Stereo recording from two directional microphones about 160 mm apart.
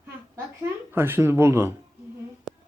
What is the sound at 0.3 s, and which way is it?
Speech, 15° right (ahead or behind).